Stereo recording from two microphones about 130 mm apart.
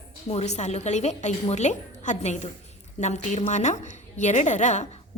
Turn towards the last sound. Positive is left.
turn(degrees=65)  # may be behind; listen again after turning